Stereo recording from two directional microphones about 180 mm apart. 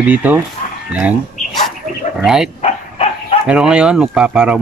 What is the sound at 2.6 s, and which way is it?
Dog, 35° left (ahead or behind).